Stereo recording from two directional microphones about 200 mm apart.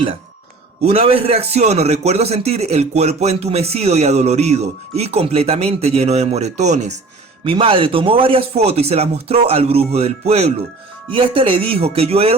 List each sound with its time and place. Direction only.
0.9 s a man's voice: 30° right (ahead or behind)